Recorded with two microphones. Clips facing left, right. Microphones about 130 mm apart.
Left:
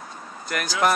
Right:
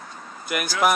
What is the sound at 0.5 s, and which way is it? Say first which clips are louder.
Speech: right 2 dB; 10° right (ahead or behind).